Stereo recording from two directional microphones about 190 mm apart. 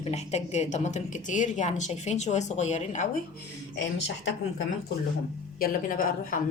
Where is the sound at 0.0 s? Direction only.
35° left (ahead or behind).